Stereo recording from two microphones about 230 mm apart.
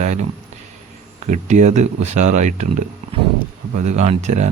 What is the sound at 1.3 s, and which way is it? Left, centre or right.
Speech, right.